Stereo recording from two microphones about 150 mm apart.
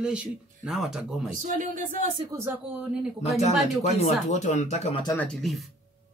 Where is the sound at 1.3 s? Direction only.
60° right (ahead or behind).